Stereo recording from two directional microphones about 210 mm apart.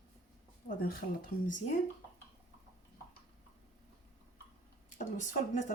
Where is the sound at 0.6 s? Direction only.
45° left (ahead or behind).